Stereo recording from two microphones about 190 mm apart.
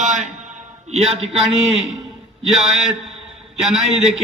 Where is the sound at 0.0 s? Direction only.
40° right (ahead or behind).